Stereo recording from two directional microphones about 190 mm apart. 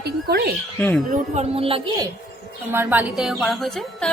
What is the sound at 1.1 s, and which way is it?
Speech, 35° right (ahead or behind).